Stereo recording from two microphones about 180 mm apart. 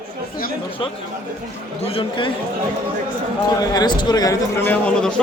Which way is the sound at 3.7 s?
25° left (ahead or behind).